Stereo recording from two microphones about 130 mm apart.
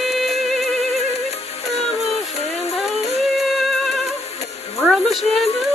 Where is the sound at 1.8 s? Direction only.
55° left (ahead or behind).